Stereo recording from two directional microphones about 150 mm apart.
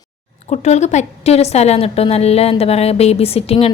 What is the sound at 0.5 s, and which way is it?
A woman's voice, 50° left (ahead or behind).